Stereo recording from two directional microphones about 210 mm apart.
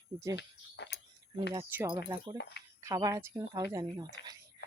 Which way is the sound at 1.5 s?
10° right (ahead or behind).